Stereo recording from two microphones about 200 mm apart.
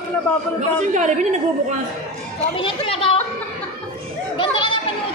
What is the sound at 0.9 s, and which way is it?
Speech, 35° right (ahead or behind).